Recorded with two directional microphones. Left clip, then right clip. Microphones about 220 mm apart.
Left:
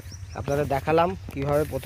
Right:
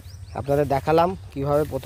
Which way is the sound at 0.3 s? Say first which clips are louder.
Right 4 dB; 30° right (ahead or behind).